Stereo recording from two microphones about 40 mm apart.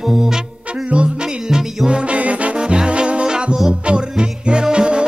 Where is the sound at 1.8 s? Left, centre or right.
Right.